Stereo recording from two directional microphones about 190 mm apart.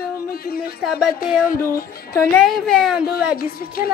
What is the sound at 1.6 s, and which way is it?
Music, 15° left (ahead or behind).